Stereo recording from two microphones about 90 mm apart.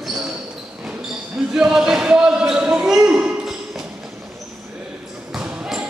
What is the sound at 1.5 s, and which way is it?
Basketball bounce, 5° right (ahead or behind).